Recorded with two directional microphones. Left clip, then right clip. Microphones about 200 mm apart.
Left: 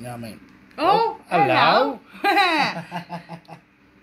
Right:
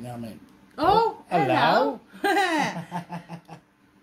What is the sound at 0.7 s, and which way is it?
Speech, 15° right (ahead or behind).